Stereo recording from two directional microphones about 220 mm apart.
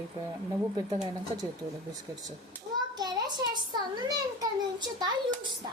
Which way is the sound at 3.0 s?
20° right (ahead or behind).